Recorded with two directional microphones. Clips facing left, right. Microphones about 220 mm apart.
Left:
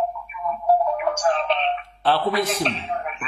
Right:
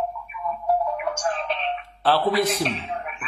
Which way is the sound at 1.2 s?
90° left.